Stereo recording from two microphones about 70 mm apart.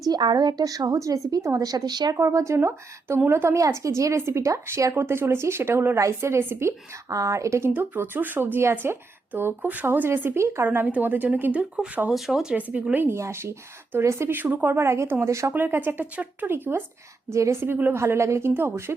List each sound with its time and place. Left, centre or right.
0.1 s a woman's voice: right
2.1 s speech: right
7.1 s speech: right
7.7 s speech: right
10.7 s speech: right
12.1 s speech: centre
12.7 s speech: right
13.1 s speech: right
14.8 s speech: right
15.3 s speech: right
15.5 s speech: right
17.2 s speech: right
18.0 s speech: right